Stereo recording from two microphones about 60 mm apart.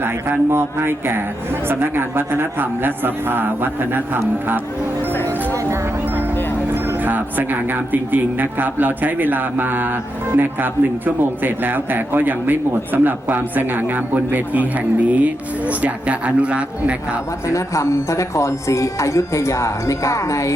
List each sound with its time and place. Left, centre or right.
0.0 s speech: right
7.0 s speech: right
17.4 s speech: left